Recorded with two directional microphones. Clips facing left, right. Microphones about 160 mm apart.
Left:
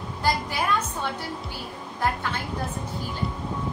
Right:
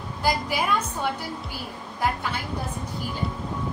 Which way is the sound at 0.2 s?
10° right (ahead or behind).